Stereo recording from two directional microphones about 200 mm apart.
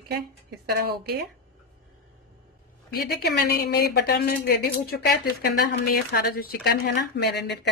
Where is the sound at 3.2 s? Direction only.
50° left (ahead or behind).